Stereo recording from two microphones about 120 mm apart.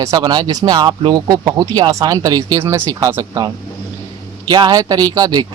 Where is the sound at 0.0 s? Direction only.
30° right (ahead or behind).